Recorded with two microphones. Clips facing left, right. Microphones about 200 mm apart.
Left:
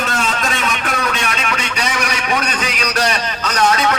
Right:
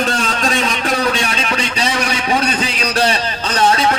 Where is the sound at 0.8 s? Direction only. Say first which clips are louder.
Right 4 dB; 30° right (ahead or behind).